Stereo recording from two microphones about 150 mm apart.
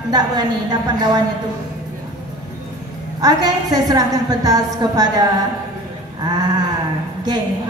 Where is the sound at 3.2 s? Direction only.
25° right (ahead or behind).